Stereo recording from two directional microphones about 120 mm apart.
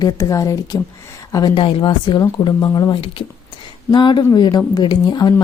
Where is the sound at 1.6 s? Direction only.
45° left (ahead or behind).